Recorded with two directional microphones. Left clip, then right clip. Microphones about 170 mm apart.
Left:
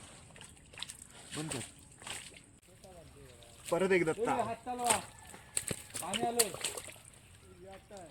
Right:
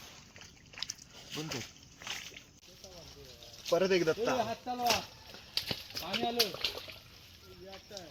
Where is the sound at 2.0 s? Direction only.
90° left.